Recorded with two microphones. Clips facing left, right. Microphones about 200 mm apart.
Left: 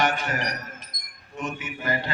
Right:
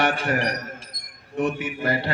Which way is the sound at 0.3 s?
35° right (ahead or behind).